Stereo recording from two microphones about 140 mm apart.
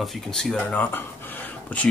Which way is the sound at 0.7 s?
15° left (ahead or behind).